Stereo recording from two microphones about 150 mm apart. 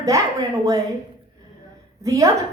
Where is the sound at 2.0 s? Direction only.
20° right (ahead or behind).